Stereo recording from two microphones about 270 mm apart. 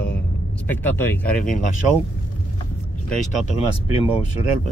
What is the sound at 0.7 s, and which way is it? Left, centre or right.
Speech, centre.